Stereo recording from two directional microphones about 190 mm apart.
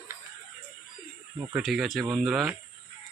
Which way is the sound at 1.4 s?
15° right (ahead or behind).